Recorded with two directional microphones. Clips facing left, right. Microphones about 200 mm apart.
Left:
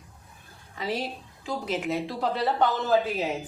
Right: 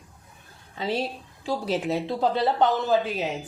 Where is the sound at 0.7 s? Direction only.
25° right (ahead or behind).